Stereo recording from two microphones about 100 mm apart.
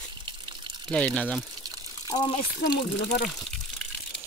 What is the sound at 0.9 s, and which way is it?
Speech, 15° left (ahead or behind).